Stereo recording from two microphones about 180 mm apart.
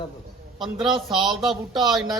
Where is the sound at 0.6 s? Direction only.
Centre (ahead or behind).